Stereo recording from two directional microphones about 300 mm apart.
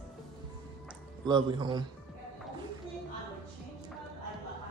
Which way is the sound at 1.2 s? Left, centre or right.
Centre.